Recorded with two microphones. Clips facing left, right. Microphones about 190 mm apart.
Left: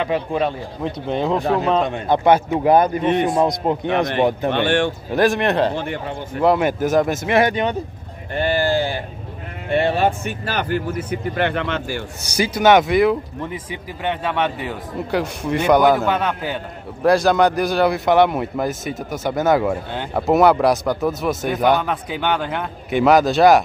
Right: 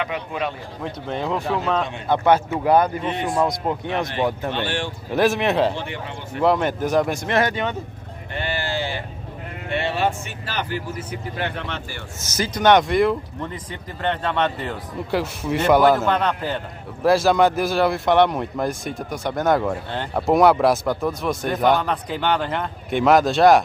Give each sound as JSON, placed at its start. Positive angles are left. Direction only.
{"t": 0.0, "sound": "a man's voice", "side_deg": 30}
{"t": 1.0, "sound": "speech", "side_deg": 20}
{"t": 4.5, "sound": "speech", "side_deg": 60}
{"t": 5.1, "sound": "a man's voice", "side_deg": 0}
{"t": 5.8, "sound": "speech", "side_deg": 45}
{"t": 6.4, "sound": "a man's voice", "side_deg": 5}
{"t": 7.3, "sound": "speech", "side_deg": 15}
{"t": 8.4, "sound": "sheep", "side_deg": 45}
{"t": 9.7, "sound": "speech", "side_deg": 45}
{"t": 12.3, "sound": "a man's voice", "side_deg": 10}